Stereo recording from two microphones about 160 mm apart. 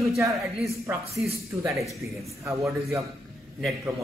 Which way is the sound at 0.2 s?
20° right (ahead or behind).